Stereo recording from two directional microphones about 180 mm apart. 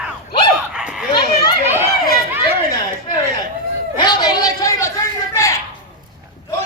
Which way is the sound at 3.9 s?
25° left (ahead or behind).